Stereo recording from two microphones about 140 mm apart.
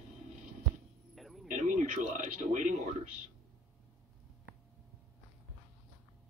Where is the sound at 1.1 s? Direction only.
Centre (ahead or behind).